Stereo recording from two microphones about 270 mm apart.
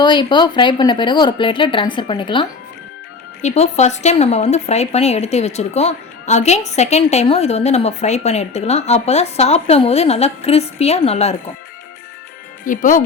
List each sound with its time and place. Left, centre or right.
0.0 s a woman's voice: centre
12.6 s a woman's voice: left